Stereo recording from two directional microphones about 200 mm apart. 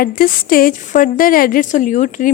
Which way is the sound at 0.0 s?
45° left (ahead or behind).